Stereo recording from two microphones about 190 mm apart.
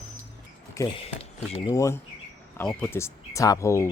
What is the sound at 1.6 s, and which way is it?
Speech, 15° left (ahead or behind).